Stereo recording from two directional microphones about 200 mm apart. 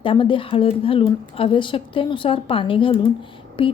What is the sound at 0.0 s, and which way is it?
A woman's voice, 25° left (ahead or behind).